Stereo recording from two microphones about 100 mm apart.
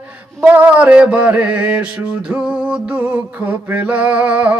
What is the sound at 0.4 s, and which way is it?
Mantra, 15° right (ahead or behind).